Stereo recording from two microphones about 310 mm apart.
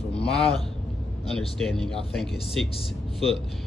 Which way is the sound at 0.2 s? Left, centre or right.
Centre.